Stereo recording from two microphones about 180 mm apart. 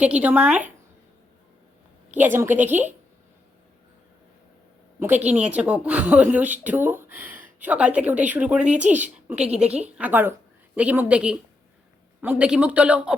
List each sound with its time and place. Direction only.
0.0 s speech: 10° right (ahead or behind)
2.1 s speech: 10° right (ahead or behind)
4.9 s speech: 10° right (ahead or behind)